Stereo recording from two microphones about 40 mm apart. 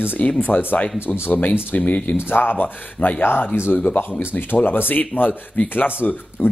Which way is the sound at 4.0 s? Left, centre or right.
Left.